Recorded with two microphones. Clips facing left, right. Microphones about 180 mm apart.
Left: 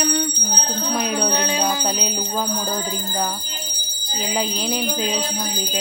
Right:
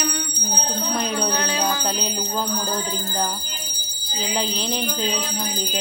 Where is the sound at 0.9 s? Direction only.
10° left (ahead or behind).